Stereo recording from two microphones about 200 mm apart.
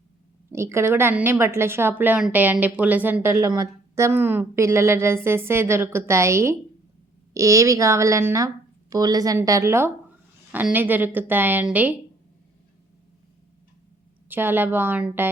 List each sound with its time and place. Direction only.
0.5 s speech: 15° right (ahead or behind)
14.3 s speech: 10° right (ahead or behind)